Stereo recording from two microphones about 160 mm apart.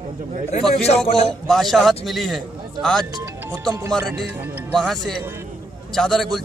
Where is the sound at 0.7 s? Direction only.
40° left (ahead or behind).